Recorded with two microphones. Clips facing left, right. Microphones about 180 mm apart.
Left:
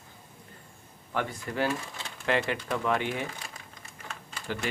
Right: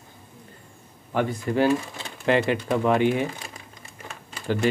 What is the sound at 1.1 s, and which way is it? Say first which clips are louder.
Speech: right 8 dB; 25° right (ahead or behind).